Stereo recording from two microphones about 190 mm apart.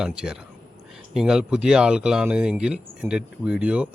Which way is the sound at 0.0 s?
5° right (ahead or behind).